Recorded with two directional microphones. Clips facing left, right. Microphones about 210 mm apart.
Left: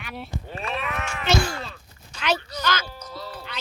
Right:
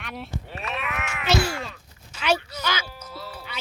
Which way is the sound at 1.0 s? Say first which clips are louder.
Right 1 dB; centre (ahead or behind).